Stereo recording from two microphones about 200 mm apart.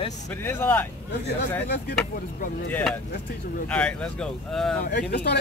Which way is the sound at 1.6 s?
55° left (ahead or behind).